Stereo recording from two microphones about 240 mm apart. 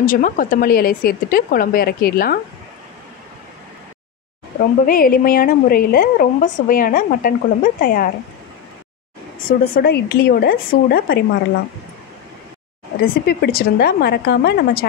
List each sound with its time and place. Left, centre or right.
0.0 s a woman's voice: left
4.8 s a woman's voice: left
9.5 s a woman's voice: left
13.0 s a woman's voice: left